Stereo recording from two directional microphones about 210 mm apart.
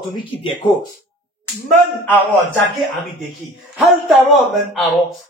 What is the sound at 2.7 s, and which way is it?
A man's voice, centre (ahead or behind).